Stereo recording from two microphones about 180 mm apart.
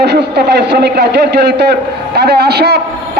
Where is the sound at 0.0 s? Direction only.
70° right (ahead or behind).